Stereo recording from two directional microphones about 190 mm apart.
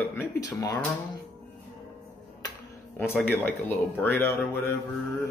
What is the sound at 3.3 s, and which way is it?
Speech, 10° left (ahead or behind).